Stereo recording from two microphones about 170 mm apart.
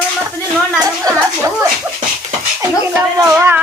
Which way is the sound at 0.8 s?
20° right (ahead or behind).